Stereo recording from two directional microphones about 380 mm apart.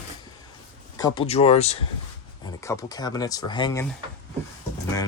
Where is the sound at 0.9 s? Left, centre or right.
Centre.